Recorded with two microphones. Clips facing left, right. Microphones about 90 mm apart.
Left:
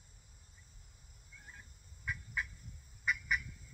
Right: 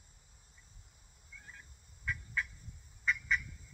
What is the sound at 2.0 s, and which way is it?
Turkey, 15° left (ahead or behind).